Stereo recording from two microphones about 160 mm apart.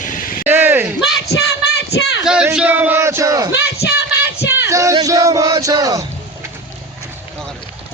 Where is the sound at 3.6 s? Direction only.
90° left.